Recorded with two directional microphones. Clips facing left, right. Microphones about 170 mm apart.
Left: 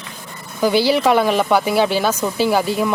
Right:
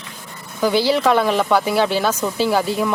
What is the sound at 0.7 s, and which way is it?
Speech, 25° right (ahead or behind).